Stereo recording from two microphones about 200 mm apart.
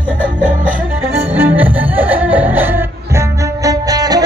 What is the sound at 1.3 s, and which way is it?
Music, 10° right (ahead or behind).